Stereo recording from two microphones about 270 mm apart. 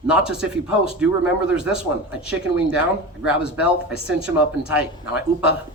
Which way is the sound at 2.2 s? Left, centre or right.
Centre.